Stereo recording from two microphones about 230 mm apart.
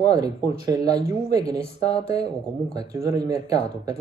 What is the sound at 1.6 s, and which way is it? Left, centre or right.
Speech, left.